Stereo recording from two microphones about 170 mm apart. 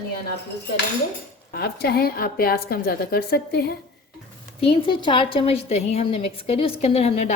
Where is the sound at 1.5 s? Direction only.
65° left (ahead or behind).